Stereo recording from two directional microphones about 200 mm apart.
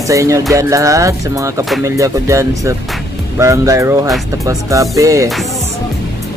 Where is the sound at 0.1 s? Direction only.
15° right (ahead or behind).